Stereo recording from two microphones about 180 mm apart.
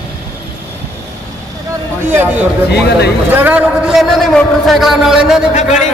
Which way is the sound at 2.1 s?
10° right (ahead or behind).